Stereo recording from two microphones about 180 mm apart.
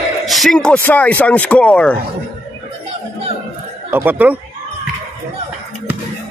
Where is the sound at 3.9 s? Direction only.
10° right (ahead or behind).